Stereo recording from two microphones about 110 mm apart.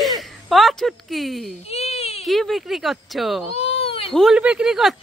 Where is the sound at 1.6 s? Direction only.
70° left (ahead or behind).